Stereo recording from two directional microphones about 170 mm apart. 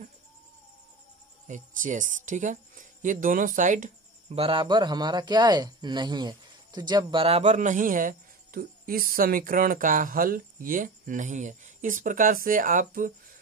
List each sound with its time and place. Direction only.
1.5 s speech: 50° right (ahead or behind)
4.4 s speech: 30° right (ahead or behind)
7.2 s speech: 40° right (ahead or behind)